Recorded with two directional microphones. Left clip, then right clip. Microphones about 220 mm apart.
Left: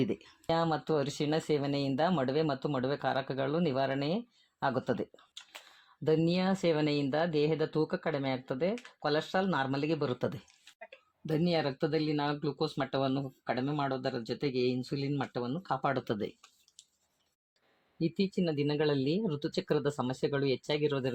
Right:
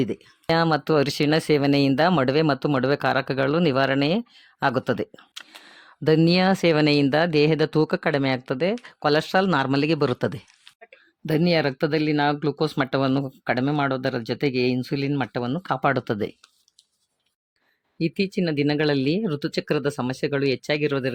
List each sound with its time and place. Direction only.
0.4 s speech: 40° right (ahead or behind)
18.0 s speech: 30° right (ahead or behind)